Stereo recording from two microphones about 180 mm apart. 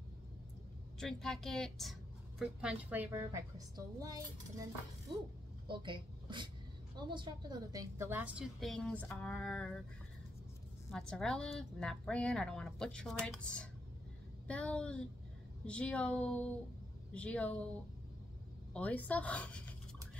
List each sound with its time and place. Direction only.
0.9 s a woman's voice: 5° left (ahead or behind); by 4.2 s 20° right (ahead or behind)
5.7 s a woman's voice: 25° right (ahead or behind); by 9.7 s 5° left (ahead or behind)
10.9 s a woman's voice: 5° left (ahead or behind)
18.7 s a woman's voice: 5° left (ahead or behind)